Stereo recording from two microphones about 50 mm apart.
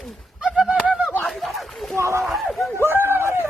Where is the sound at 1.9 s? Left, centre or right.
Right.